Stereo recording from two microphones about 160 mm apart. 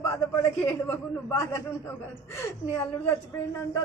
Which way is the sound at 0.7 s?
15° left (ahead or behind).